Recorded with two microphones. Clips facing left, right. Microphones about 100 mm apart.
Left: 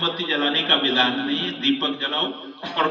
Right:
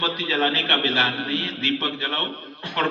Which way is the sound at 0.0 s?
25° left (ahead or behind).